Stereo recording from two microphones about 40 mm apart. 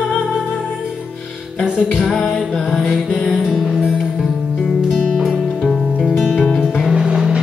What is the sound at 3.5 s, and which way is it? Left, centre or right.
Music, centre.